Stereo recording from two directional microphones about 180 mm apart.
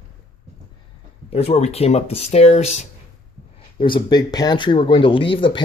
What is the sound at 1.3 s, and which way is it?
Speech, 35° left (ahead or behind).